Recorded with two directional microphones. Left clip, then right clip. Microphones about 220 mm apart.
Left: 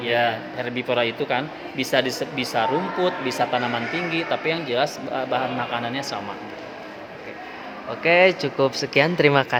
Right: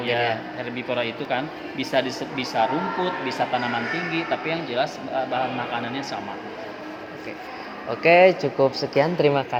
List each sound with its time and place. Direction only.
0.0 s a man's voice: 50° left (ahead or behind)
8.2 s speech: 10° left (ahead or behind)